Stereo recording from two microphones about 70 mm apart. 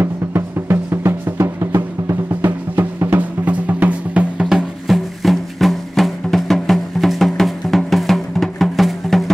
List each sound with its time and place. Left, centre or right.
0.0 s drum: right; by 4.5 s centre
4.5 s music: centre